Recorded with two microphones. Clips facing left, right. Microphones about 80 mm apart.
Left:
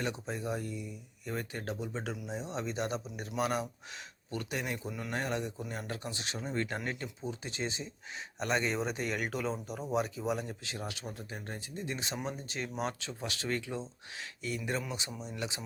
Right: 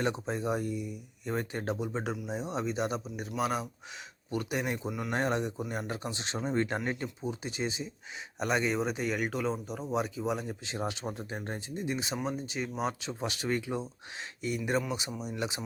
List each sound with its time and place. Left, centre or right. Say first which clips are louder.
0.0 s speech: right 5 dB; right; by 3.7 s centre
4.3 s speech: right 4 dB; centre
4.9 s speech: right 4 dB; centre
5.1 s speech: right 5 dB; right; by 10.6 s centre
10.6 s speech: right 6 dB; right
11.8 s speech: right 4 dB; centre
13.0 s speech: right 4 dB; right